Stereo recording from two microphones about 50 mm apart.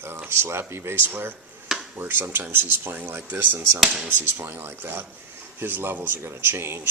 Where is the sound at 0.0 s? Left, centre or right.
Right.